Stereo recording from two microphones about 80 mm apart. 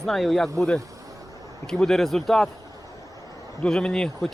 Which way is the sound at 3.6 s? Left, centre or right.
Centre.